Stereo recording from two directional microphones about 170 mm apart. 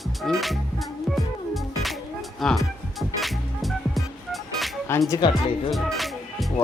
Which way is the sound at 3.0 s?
Centre (ahead or behind).